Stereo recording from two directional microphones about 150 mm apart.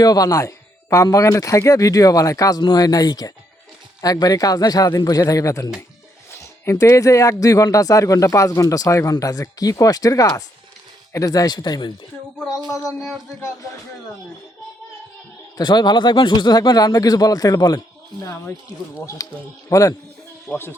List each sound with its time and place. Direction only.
0.0 s speech: 25° left (ahead or behind)
12.5 s a sound: 5° right (ahead or behind)
15.5 s speech: 30° left (ahead or behind)
19.0 s speech: 20° left (ahead or behind)